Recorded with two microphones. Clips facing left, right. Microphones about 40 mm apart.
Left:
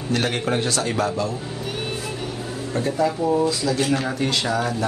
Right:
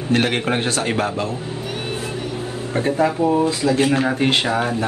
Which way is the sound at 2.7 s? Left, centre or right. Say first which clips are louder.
Right 3 dB; right.